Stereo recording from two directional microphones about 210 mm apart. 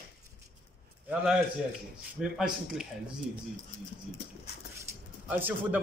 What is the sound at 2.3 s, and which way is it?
Speech, centre (ahead or behind).